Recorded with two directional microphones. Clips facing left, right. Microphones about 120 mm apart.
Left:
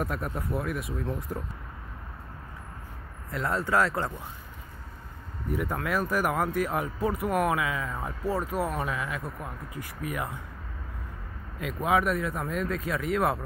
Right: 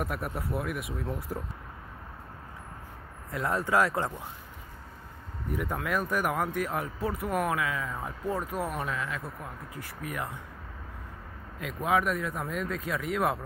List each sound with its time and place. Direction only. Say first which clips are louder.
0.0 s speech: left 1 dB; 10° right (ahead or behind)
3.3 s speech: even; 20° right (ahead or behind)
5.5 s speech: left 2 dB; centre (ahead or behind)
11.6 s speech: left 2 dB; centre (ahead or behind)